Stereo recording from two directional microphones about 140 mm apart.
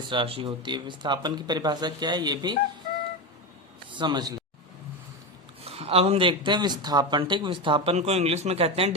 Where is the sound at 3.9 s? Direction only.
30° right (ahead or behind).